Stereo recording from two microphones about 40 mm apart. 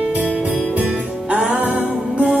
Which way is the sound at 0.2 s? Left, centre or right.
Right.